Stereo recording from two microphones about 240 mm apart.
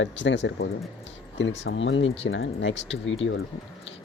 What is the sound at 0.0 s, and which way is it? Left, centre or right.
Speech, left.